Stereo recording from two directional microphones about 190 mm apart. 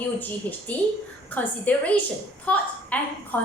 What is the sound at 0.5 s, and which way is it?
A woman's voice, 10° left (ahead or behind).